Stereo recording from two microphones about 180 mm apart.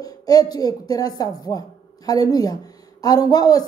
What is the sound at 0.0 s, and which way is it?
Speech, 20° left (ahead or behind).